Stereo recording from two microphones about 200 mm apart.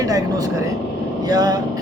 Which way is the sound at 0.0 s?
15° right (ahead or behind).